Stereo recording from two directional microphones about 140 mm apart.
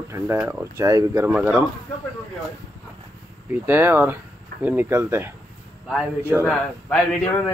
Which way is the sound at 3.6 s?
15° right (ahead or behind).